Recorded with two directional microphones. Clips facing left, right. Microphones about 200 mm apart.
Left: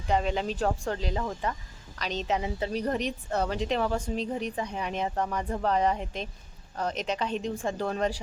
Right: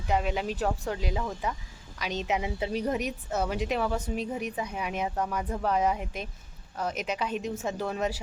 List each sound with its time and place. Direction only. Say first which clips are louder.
0.1 s speech: left 1 dB; 5° right (ahead or behind)